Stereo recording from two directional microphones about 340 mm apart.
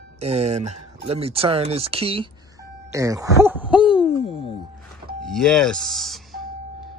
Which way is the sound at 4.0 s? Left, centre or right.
Centre.